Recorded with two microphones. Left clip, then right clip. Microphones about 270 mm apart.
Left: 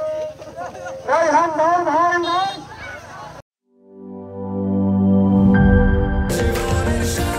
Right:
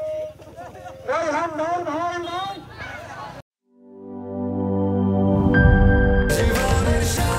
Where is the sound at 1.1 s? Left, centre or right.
Left.